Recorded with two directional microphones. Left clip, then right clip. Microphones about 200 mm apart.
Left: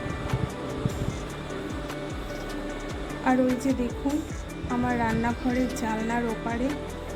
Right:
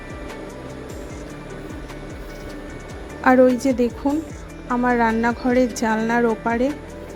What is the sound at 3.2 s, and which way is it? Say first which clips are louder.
A woman's voice: right 10 dB; 40° right (ahead or behind).